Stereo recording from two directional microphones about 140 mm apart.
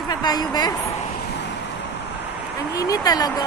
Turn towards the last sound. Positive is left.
turn(degrees=30)  # may be behind; listen again after turning